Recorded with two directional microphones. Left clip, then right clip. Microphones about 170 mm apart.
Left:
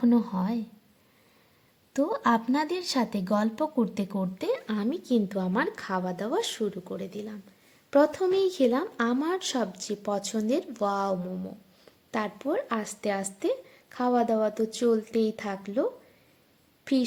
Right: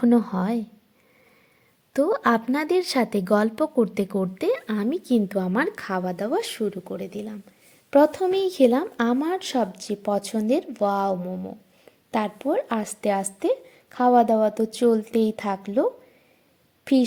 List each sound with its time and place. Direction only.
0.0 s a woman's voice: 30° right (ahead or behind)
1.9 s a woman's voice: 30° right (ahead or behind)